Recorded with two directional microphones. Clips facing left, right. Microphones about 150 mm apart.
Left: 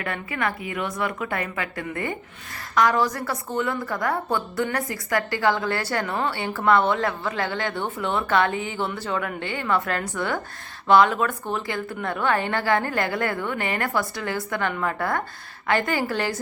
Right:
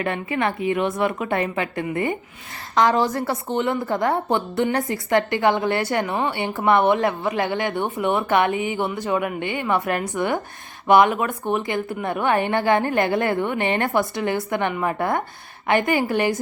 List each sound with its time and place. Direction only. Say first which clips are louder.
0.0 s a woman's voice: right 5 dB; 25° right (ahead or behind)